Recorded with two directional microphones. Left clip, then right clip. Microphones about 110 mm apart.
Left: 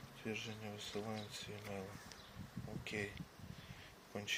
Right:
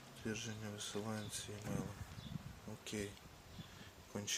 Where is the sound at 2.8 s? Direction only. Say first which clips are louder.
Left 2 dB; 65° right (ahead or behind).